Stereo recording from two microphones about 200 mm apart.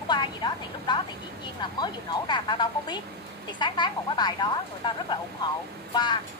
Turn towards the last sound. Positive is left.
turn(degrees=20)  # may be behind; listen again after turning